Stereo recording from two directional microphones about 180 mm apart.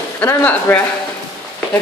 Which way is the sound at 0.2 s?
10° left (ahead or behind).